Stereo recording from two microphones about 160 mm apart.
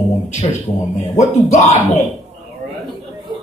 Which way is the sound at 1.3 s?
45° left (ahead or behind).